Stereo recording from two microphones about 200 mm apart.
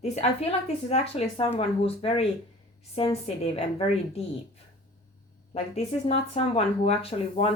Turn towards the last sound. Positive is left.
turn(degrees=30)  # may be behind; listen again after turning